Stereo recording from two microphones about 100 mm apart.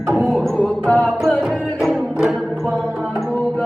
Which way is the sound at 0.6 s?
10° left (ahead or behind).